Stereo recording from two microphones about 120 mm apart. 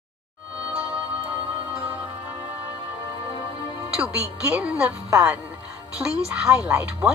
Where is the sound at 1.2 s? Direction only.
55° right (ahead or behind).